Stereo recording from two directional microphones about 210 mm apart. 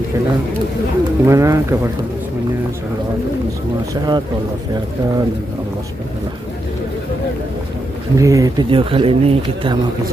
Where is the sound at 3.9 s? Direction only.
20° right (ahead or behind).